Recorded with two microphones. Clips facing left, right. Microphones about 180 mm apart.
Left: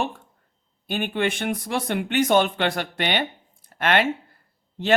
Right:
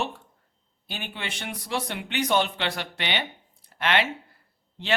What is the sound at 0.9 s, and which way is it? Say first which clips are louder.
Speech: left 12 dB; 55° left (ahead or behind).